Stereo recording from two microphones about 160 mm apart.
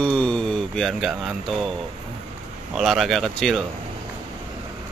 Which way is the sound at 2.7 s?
Centre (ahead or behind).